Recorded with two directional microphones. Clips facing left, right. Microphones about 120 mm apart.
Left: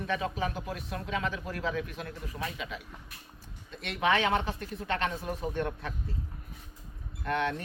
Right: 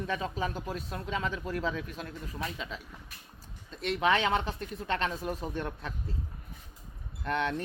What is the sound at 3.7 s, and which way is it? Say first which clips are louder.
Speech: right 1 dB; 30° right (ahead or behind).